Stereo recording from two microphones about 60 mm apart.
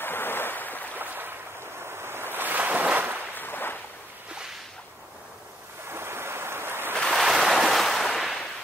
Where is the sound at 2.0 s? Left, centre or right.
Right.